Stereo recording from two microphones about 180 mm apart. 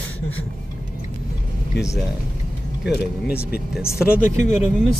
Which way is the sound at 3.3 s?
60° left (ahead or behind).